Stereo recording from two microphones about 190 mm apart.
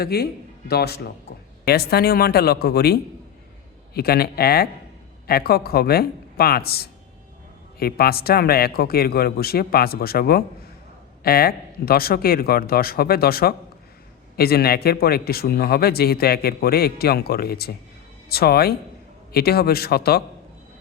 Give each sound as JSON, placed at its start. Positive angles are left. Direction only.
{"t": 0.0, "sound": "speech", "side_deg": 55}